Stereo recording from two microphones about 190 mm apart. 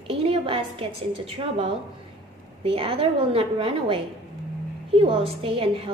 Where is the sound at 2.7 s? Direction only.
30° right (ahead or behind).